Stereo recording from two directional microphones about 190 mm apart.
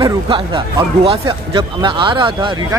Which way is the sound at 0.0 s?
25° right (ahead or behind).